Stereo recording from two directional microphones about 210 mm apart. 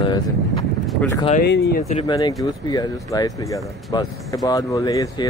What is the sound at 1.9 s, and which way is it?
Speech, 30° left (ahead or behind).